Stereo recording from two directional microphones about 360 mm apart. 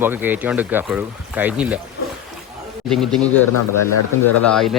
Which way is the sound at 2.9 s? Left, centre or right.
Centre.